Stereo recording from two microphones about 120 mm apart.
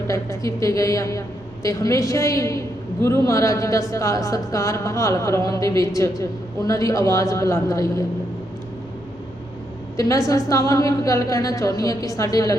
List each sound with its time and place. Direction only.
0.1 s a woman's voice: 25° left (ahead or behind)
10.0 s a woman's voice: 25° left (ahead or behind)